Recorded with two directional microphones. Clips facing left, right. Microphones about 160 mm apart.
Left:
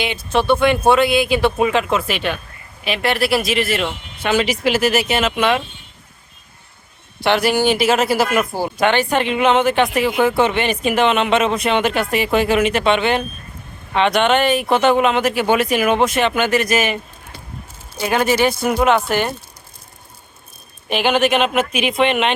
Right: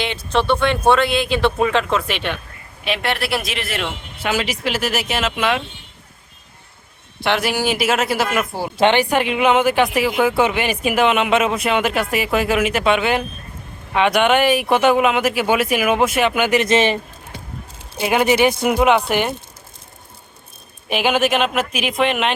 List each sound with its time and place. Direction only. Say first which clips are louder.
0.0 s speech: left 1 dB; 5° left (ahead or behind)
7.2 s speech: left 4 dB; centre (ahead or behind)
8.8 s speech: right 2 dB; 15° right (ahead or behind)
17.9 s speech: right 1 dB; 20° right (ahead or behind)
20.9 s speech: left 1 dB; 5° right (ahead or behind)